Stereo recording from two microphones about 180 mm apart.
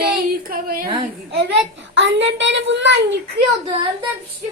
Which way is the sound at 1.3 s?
75° right (ahead or behind).